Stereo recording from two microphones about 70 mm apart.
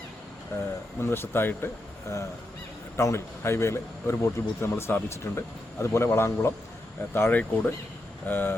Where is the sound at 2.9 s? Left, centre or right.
Left.